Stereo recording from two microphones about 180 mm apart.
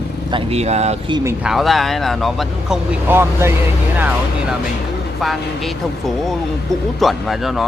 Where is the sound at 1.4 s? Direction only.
Centre (ahead or behind).